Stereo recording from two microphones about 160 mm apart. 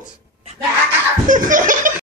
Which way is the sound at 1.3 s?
55° right (ahead or behind).